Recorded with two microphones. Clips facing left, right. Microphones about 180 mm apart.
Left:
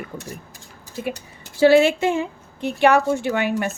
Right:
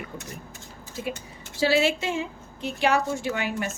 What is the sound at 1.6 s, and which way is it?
A woman's voice, 55° left (ahead or behind).